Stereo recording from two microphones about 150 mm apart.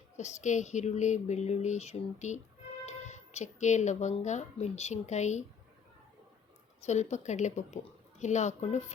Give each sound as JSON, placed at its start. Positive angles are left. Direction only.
{"t": 0.2, "sound": "speech", "side_deg": 50}
{"t": 6.8, "sound": "speech", "side_deg": 50}